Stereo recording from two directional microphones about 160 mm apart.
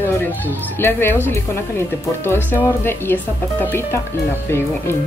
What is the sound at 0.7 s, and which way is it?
Speech, 15° left (ahead or behind).